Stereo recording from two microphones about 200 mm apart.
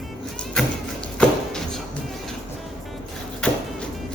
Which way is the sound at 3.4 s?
5° left (ahead or behind).